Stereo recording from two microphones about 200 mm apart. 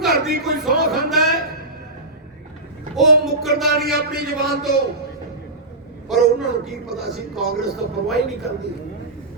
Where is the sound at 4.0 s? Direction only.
50° right (ahead or behind).